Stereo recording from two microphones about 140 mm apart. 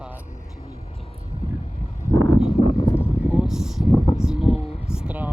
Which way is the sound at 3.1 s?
5° right (ahead or behind).